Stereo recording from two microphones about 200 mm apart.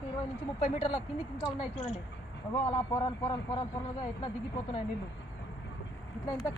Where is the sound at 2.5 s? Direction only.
25° left (ahead or behind).